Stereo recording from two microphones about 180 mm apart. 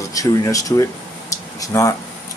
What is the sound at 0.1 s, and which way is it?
Speech, 20° left (ahead or behind).